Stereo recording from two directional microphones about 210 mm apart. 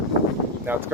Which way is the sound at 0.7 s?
10° right (ahead or behind).